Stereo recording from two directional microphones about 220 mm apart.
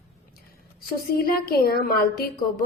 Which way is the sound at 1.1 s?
45° left (ahead or behind).